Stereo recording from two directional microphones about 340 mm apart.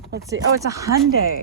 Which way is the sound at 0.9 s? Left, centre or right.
Right.